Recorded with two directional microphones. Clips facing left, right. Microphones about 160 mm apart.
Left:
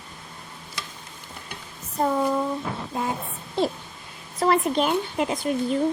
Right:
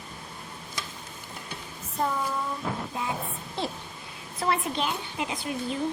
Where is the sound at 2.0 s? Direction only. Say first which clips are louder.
Left 7 dB; 45° left (ahead or behind).